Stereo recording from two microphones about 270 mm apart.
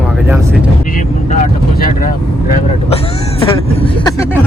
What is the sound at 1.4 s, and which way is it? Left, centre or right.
Speech, left.